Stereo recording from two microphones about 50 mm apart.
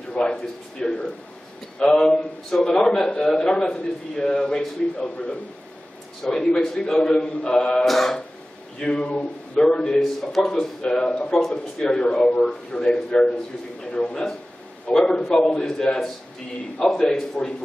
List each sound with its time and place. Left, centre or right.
0.1 s a man's voice: centre
7.8 s a sound: centre
8.8 s a man's voice: centre
9.9 s a man's voice: centre